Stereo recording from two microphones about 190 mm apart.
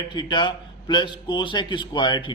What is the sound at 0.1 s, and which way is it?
A man's voice, 25° left (ahead or behind).